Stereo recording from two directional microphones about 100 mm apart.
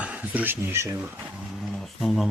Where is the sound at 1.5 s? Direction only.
Centre (ahead or behind).